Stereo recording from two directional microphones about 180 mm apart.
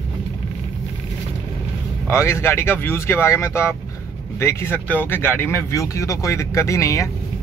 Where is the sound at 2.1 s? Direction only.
15° left (ahead or behind).